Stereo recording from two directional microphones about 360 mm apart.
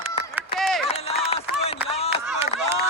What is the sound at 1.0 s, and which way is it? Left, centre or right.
Run, centre.